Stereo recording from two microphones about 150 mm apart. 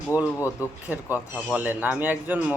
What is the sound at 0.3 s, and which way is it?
Speech, 20° left (ahead or behind).